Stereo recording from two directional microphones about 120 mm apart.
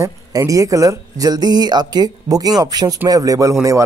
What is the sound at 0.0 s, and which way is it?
Speech, 30° right (ahead or behind).